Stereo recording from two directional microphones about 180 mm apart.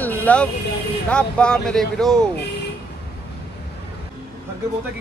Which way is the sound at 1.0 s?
5° left (ahead or behind).